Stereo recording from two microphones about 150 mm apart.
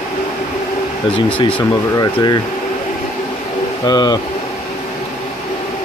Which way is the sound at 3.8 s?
25° left (ahead or behind).